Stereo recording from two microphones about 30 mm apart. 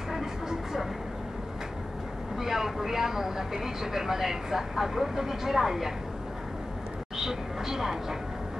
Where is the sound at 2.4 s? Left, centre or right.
Centre.